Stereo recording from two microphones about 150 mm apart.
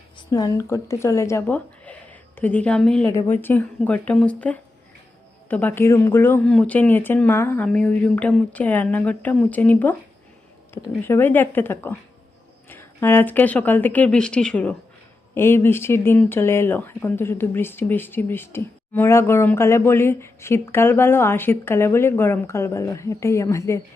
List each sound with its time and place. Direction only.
0.3 s speech: 25° left (ahead or behind); by 3.1 s 5° left (ahead or behind)
3.1 s speech: 15° left (ahead or behind)
11.0 s speech: 15° left (ahead or behind)